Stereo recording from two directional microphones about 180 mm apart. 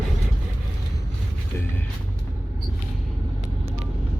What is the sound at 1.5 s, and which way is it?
Speech, 15° left (ahead or behind).